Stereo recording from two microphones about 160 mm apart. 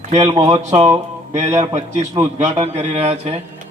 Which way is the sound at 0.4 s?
45° right (ahead or behind).